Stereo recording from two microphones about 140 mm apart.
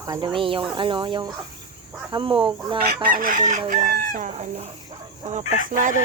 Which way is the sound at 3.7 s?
80° right.